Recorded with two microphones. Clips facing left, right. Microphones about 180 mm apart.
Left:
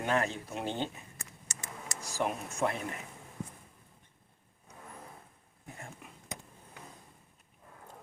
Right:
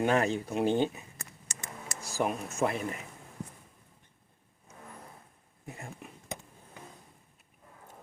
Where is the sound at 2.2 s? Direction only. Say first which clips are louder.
Right 1 dB; 5° right (ahead or behind).